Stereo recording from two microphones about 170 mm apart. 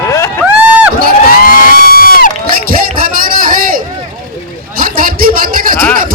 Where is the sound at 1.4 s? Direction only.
60° left (ahead or behind).